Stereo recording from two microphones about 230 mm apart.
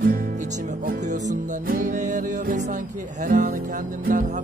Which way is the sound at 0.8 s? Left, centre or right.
Right.